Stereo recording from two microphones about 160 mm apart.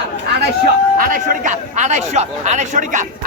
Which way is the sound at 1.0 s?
55° right (ahead or behind).